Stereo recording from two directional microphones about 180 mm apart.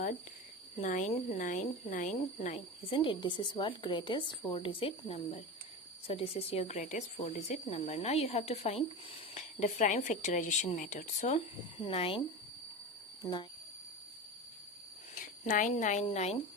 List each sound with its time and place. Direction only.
0.8 s speech: 40° left (ahead or behind)
1.4 s speech: 45° left (ahead or behind)
13.2 s speech: 15° left (ahead or behind)
15.1 s speech: 45° left (ahead or behind)